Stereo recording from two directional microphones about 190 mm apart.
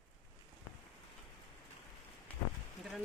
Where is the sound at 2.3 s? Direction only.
5° left (ahead or behind).